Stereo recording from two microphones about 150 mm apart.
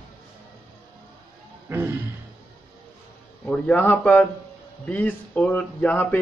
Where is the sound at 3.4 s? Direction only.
10° left (ahead or behind).